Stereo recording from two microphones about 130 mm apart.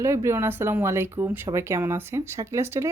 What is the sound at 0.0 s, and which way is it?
Speech, 25° right (ahead or behind).